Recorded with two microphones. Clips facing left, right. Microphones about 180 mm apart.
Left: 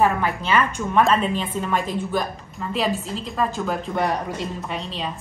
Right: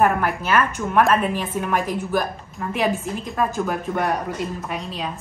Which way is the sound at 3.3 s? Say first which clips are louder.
Right 1 dB; 5° right (ahead or behind).